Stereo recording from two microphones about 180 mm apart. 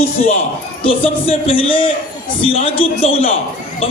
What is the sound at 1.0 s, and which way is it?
Speech, 30° left (ahead or behind).